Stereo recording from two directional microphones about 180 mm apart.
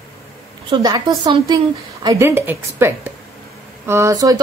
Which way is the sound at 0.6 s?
25° right (ahead or behind).